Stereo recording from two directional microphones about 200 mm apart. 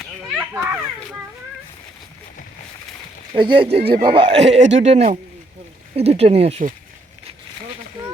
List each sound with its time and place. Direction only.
0.5 s children playing: 10° right (ahead or behind)
3.3 s speech: 25° right (ahead or behind)